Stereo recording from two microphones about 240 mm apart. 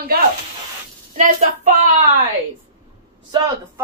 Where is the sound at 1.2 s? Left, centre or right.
Right.